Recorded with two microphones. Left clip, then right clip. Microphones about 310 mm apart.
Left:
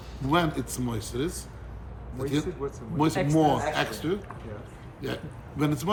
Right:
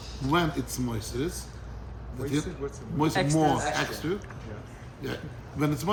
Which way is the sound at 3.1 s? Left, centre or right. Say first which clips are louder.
Right 1 dB; right.